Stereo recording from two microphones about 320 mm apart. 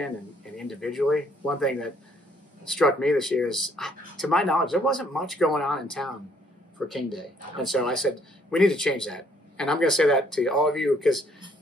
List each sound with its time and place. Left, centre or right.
0.6 s speech: centre